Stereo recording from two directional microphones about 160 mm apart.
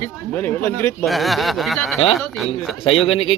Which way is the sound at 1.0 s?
Centre (ahead or behind).